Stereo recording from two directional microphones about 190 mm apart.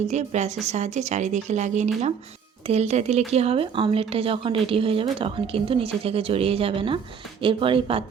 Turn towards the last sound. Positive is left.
turn(degrees=-30)  # may be behind; listen again after turning